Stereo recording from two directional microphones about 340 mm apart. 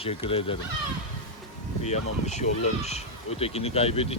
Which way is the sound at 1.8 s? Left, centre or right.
Centre.